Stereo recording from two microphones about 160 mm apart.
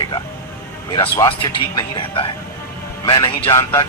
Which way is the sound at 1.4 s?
30° left (ahead or behind).